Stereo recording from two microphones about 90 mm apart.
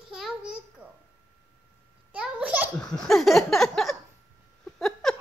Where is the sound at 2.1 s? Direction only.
15° right (ahead or behind).